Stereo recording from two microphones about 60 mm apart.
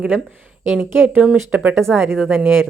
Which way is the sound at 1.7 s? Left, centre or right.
Centre.